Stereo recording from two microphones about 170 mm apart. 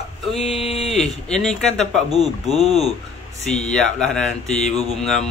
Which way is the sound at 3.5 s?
40° left (ahead or behind).